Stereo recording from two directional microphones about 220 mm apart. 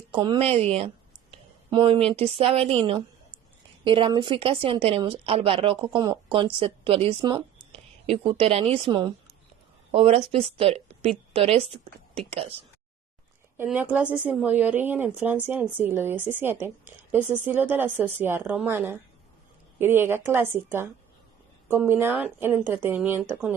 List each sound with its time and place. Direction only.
0.1 s a woman's voice: 20° right (ahead or behind)
13.6 s a woman's voice: 10° right (ahead or behind)